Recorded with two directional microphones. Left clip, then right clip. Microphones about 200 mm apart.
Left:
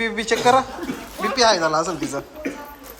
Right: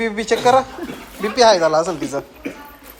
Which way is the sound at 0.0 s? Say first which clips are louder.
Right 2 dB; 15° left (ahead or behind).